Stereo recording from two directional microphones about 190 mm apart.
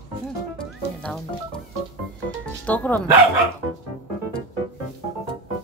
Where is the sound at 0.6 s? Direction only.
5° left (ahead or behind).